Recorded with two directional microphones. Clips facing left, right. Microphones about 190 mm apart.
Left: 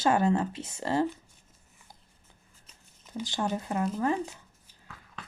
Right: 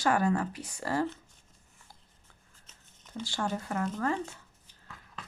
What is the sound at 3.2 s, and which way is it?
Speech, 20° left (ahead or behind).